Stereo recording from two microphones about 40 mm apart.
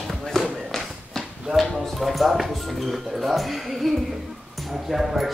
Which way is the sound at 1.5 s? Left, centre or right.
Centre.